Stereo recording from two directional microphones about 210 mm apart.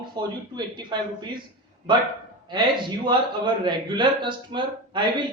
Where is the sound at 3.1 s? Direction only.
20° right (ahead or behind).